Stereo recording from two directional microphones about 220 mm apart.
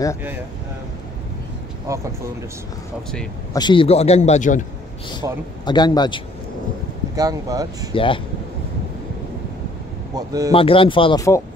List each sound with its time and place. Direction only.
1.9 s speech: 15° right (ahead or behind)
3.5 s a man's voice: 20° left (ahead or behind)
5.2 s speech: 15° right (ahead or behind)
5.7 s a man's voice: 20° left (ahead or behind)
7.2 s speech: 15° right (ahead or behind)
7.9 s a man's voice: 25° left (ahead or behind)
10.1 s speech: 15° right (ahead or behind)
10.5 s a man's voice: 25° left (ahead or behind)